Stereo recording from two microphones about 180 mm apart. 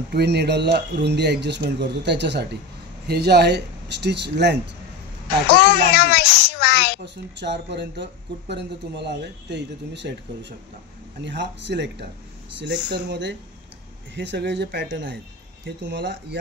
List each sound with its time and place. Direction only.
0.1 s speech: 65° right (ahead or behind)
5.5 s a child's voice: 60° left (ahead or behind)
7.3 s speech: 75° right (ahead or behind)